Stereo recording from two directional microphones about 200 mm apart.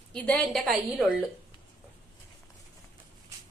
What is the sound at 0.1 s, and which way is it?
A woman's voice, 5° left (ahead or behind).